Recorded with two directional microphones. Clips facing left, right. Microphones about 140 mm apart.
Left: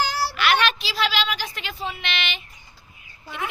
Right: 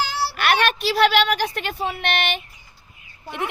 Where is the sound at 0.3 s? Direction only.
55° right (ahead or behind).